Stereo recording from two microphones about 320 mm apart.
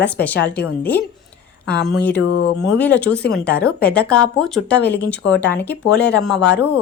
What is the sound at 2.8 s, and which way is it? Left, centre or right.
Speech, centre.